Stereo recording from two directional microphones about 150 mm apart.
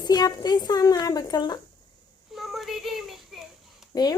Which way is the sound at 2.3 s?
Centre (ahead or behind).